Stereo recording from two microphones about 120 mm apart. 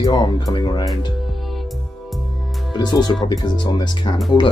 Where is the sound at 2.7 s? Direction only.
35° left (ahead or behind).